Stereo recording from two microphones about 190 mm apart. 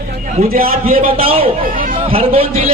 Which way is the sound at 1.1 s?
30° right (ahead or behind).